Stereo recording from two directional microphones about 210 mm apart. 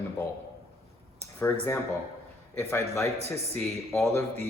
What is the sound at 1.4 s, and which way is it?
Speech, 10° left (ahead or behind).